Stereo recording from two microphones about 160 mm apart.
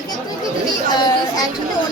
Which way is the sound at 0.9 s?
25° left (ahead or behind).